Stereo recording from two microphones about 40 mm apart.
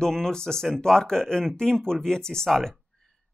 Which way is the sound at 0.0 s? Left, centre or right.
Centre.